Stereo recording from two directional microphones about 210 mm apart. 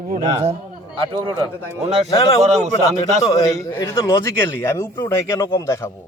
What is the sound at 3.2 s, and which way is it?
Speech, 15° left (ahead or behind).